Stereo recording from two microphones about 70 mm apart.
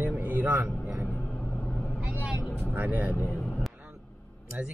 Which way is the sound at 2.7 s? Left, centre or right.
Right.